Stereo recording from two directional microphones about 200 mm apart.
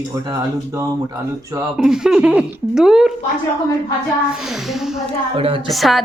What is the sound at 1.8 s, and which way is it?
A woman's voice, 5° right (ahead or behind).